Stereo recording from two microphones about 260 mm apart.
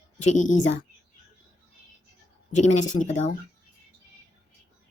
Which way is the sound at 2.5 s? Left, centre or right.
Left.